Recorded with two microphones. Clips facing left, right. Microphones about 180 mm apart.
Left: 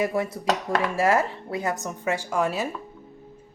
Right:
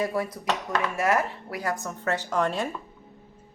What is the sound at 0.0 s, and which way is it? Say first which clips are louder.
A woman's voice: left 3 dB; 25° left (ahead or behind).